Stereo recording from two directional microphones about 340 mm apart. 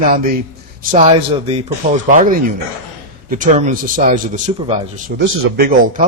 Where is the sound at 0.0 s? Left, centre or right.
Right.